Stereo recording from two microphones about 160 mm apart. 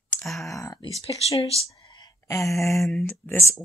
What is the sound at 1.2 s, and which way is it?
Speech, 40° left (ahead or behind).